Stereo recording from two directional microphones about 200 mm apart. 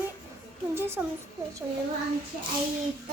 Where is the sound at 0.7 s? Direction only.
10° right (ahead or behind).